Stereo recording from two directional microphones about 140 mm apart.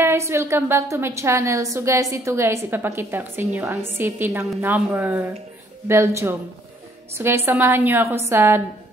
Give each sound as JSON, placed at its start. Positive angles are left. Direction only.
{"t": 0.0, "sound": "a woman's voice", "side_deg": -20}